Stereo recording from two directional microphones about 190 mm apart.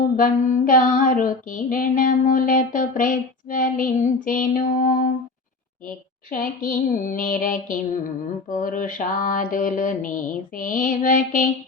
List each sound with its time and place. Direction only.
0.2 s female singing: 45° left (ahead or behind)
6.3 s female singing: 45° left (ahead or behind)